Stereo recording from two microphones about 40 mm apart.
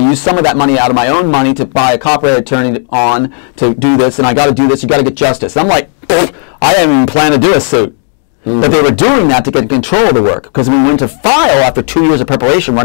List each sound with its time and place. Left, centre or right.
0.1 s a man's voice: centre
2.1 s a man's voice: centre